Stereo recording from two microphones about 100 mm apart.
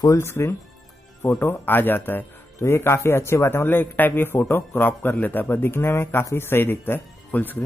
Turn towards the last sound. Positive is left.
turn(degrees=20)  # may be behind; listen again after turning